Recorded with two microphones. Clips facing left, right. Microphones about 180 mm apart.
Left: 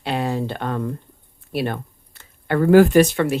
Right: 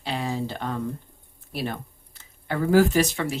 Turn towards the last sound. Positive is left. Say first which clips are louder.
# left 8 dB
turn(degrees=60)  # may be behind; listen again after turning